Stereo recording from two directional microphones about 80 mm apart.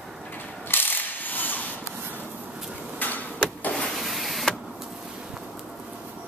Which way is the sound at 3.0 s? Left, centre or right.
Centre.